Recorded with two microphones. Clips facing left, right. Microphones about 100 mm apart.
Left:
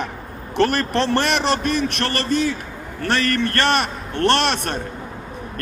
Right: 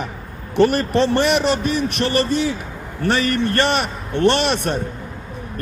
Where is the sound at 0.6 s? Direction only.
70° left (ahead or behind).